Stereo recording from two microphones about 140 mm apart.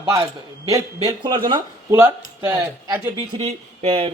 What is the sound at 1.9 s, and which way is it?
A man's voice, 20° right (ahead or behind).